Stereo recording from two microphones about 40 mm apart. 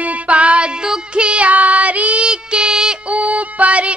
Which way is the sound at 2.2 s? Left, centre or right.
Right.